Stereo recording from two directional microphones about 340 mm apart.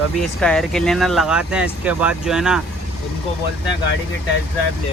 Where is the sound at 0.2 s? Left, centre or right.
Centre.